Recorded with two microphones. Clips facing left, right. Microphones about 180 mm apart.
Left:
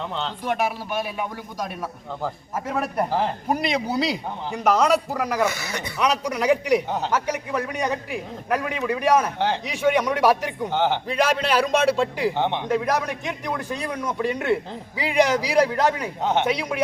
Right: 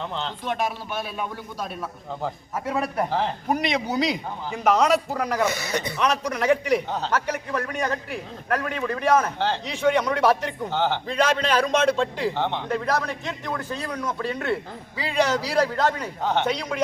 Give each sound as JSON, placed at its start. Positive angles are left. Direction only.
{"t": 0.2, "sound": "a man's voice", "side_deg": 5}
{"t": 5.5, "sound": "speech", "side_deg": -20}
{"t": 6.0, "sound": "a man's voice", "side_deg": 10}